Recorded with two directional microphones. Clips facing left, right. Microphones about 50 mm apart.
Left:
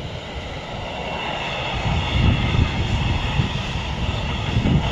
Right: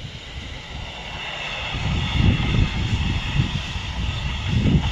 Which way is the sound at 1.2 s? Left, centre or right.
Centre.